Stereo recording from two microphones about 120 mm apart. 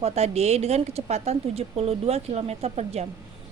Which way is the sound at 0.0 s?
60° right (ahead or behind).